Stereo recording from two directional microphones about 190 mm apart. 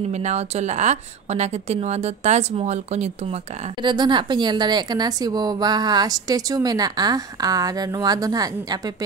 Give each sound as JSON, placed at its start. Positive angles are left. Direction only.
{"t": 0.1, "sound": "a woman's voice", "side_deg": -35}
{"t": 3.8, "sound": "a woman's voice", "side_deg": -25}